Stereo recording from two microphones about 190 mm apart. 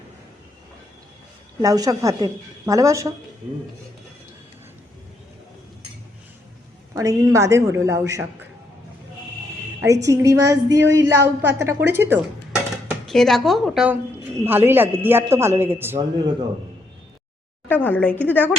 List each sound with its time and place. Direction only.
1.6 s a woman's voice: 20° right (ahead or behind)
6.9 s a woman's voice: 15° right (ahead or behind)
9.8 s a woman's voice: 15° right (ahead or behind)
12.9 s a woman's voice: centre (ahead or behind)
17.7 s speech: 10° left (ahead or behind)